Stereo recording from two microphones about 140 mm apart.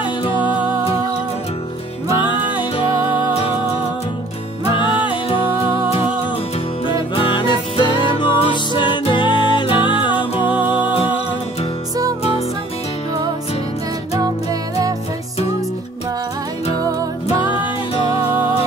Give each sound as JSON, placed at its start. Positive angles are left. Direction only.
{"t": 4.6, "sound": "music", "side_deg": 35}
{"t": 6.9, "sound": "music", "side_deg": 35}
{"t": 10.4, "sound": "music", "side_deg": -15}